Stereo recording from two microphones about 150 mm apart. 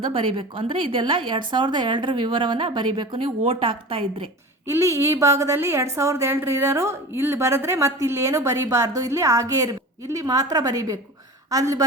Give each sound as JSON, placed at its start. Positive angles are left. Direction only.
{"t": 0.0, "sound": "a woman's voice", "side_deg": -35}
{"t": 4.7, "sound": "a woman's voice", "side_deg": -20}